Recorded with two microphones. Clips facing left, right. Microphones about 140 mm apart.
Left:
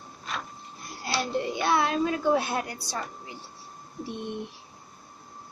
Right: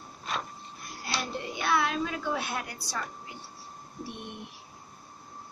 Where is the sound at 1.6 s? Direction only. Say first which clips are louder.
Left 2 dB; 35° left (ahead or behind).